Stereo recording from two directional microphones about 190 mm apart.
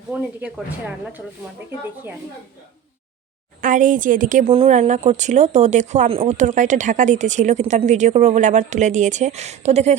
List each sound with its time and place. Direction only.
0.1 s speech: 5° right (ahead or behind)
3.6 s speech: 40° right (ahead or behind)
4.4 s speech: 30° right (ahead or behind)